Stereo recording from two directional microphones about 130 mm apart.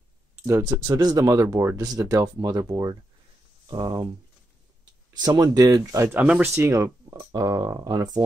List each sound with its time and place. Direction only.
0.8 s speech: 30° right (ahead or behind)
5.2 s speech: 30° right (ahead or behind)
6.1 s speech: 10° right (ahead or behind)
6.5 s speech: 20° right (ahead or behind)